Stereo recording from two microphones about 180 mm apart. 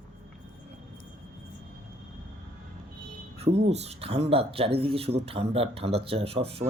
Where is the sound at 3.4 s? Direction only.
35° right (ahead or behind).